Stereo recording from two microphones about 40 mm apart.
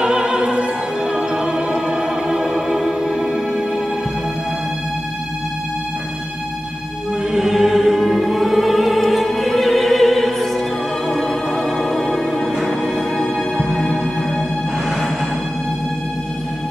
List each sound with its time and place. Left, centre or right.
0.0 s opera: centre
1.0 s music: centre
2.2 s music: centre
7.3 s choir: centre
8.1 s music: centre